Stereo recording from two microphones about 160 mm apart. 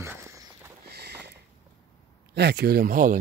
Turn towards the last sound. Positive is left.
turn(degrees=-55)  # may be behind; listen again after turning